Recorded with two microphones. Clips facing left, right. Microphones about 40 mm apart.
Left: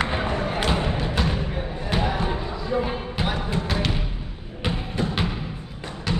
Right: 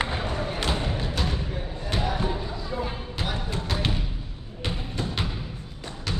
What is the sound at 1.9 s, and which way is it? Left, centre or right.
Basketball bounce, left.